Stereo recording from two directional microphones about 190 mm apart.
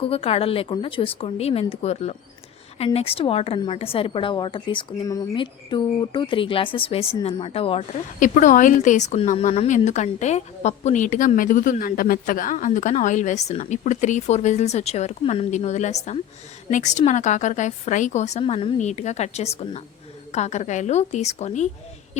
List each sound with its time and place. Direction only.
0.0 s a woman's voice: 30° left (ahead or behind)